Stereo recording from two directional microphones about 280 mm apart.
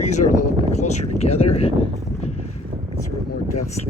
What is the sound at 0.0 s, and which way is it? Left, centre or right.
Speech, left.